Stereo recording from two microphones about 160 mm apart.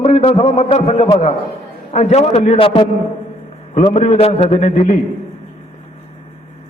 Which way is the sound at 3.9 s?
45° left (ahead or behind).